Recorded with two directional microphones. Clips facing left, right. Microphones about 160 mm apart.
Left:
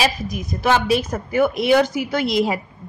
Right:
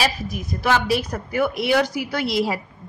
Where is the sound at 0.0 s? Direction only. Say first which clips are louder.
Left 2 dB; 15° left (ahead or behind).